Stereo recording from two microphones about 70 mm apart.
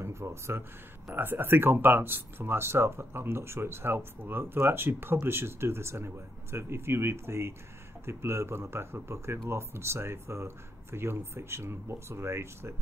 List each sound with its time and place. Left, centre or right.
0.0 s speech: right